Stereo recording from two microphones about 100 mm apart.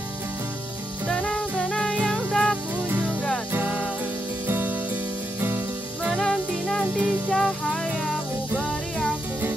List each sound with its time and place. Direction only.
1.0 s music: 5° left (ahead or behind)
2.9 s music: 20° right (ahead or behind)
6.0 s music: centre (ahead or behind)
7.3 s music: 5° left (ahead or behind)